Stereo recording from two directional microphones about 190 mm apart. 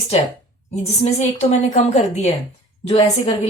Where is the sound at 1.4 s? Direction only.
35° left (ahead or behind).